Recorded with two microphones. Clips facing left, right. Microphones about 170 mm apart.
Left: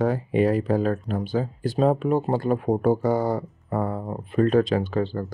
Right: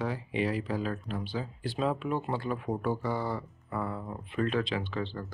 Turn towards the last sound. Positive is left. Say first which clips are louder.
# left 10 dB
turn(degrees=45)  # may be behind; listen again after turning